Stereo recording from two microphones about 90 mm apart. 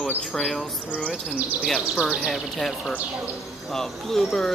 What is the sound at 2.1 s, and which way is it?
Speech, centre (ahead or behind).